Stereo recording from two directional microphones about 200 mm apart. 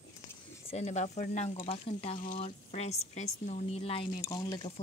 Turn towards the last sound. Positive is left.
turn(degrees=20)  # may be behind; listen again after turning